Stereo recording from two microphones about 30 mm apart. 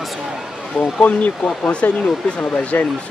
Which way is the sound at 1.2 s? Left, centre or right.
Left.